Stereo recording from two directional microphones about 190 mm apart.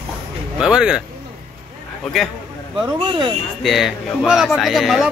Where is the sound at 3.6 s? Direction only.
Centre (ahead or behind).